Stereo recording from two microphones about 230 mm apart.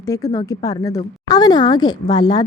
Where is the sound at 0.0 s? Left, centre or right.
Centre.